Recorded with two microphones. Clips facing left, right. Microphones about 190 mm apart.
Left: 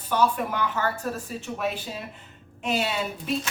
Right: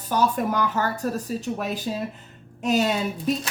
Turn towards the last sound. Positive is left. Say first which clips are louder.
# right 3 dB
turn(degrees=-40)  # may be behind; listen again after turning